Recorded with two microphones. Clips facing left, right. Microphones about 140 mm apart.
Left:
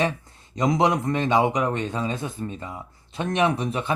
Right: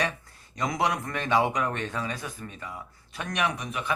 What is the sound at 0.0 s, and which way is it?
Speech, 20° left (ahead or behind).